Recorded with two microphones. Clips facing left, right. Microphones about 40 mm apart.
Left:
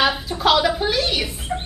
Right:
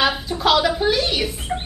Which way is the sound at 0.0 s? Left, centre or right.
Centre.